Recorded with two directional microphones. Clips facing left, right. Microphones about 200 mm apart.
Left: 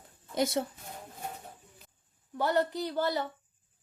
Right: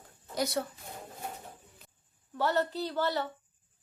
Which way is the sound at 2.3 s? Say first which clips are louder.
Left 1 dB; 15° left (ahead or behind).